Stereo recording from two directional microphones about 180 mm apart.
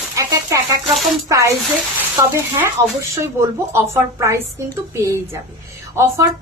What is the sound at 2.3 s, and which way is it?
A woman's voice, 15° right (ahead or behind).